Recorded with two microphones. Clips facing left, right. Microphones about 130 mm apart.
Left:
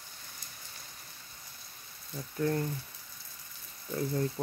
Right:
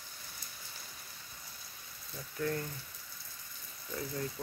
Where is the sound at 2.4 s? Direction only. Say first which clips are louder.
Left 5 dB; 30° left (ahead or behind).